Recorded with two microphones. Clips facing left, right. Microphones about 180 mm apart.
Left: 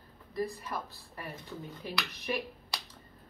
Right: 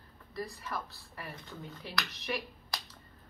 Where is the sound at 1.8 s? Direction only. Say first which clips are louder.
Even; 35° left (ahead or behind).